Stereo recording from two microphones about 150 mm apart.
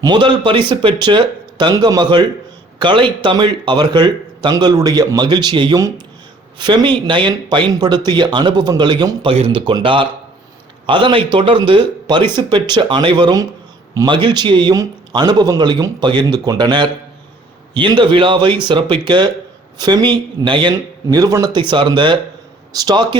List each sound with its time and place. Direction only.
0.0 s speech: 30° right (ahead or behind)
9.3 s speech: 40° right (ahead or behind)